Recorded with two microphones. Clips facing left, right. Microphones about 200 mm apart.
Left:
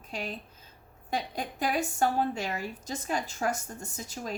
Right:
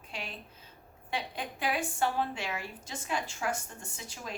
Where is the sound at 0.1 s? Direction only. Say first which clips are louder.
Left 6 dB; 40° left (ahead or behind).